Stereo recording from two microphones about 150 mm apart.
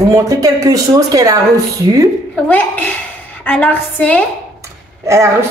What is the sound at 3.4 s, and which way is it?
Speech, 10° left (ahead or behind).